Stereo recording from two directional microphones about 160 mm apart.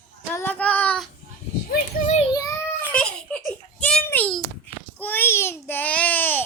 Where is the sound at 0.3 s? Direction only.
10° left (ahead or behind).